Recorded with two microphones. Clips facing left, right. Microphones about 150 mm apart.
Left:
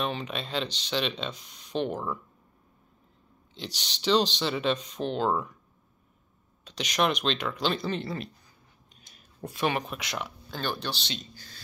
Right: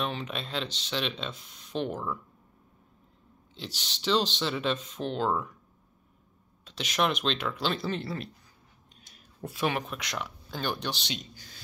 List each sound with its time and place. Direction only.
0.0 s speech: centre (ahead or behind)
3.5 s speech: centre (ahead or behind)
6.6 s speech: 5° right (ahead or behind)
10.5 s speech: 15° right (ahead or behind)